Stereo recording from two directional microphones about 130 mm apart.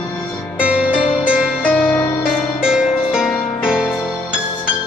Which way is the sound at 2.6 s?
5° right (ahead or behind).